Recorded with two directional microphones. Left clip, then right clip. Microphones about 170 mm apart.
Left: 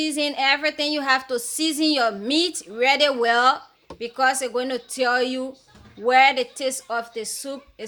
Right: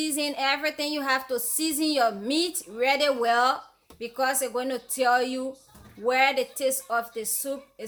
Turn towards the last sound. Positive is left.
turn(degrees=20)  # may be behind; listen again after turning